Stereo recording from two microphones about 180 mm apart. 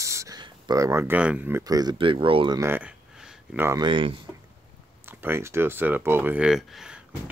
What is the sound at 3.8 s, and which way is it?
Speech, 25° right (ahead or behind).